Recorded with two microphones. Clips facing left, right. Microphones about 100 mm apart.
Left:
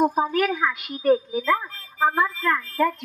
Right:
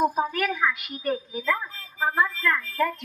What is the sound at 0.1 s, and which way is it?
A woman's voice, 35° left (ahead or behind).